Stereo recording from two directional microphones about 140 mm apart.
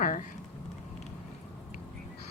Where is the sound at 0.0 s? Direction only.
70° left (ahead or behind).